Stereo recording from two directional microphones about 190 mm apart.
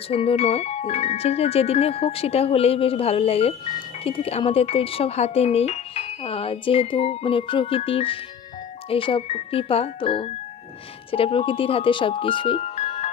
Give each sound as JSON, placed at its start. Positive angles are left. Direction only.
{"t": 0.1, "sound": "speech", "side_deg": 30}